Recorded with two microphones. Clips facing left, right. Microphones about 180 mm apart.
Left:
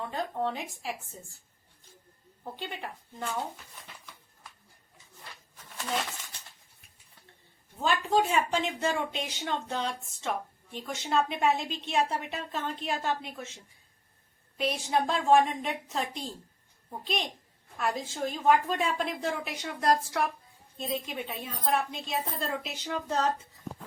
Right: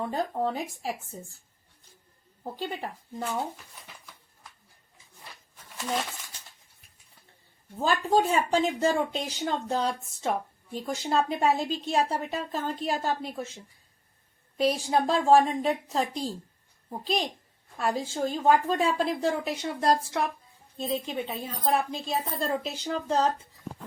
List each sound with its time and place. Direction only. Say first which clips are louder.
0.0 s speech: right 3 dB; 40° right (ahead or behind)
2.4 s speech: right 5 dB; 35° right (ahead or behind)
5.7 s coin: right 2 dB; 10° right (ahead or behind)
7.8 s speech: right 2 dB; 35° right (ahead or behind)
14.6 s speech: right 4 dB; 35° right (ahead or behind)